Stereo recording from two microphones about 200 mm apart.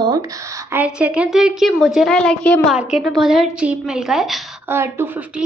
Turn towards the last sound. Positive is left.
turn(degrees=-10)  # may be behind; listen again after turning